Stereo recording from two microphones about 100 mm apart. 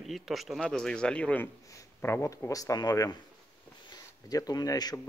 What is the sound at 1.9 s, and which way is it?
Speech, 25° left (ahead or behind).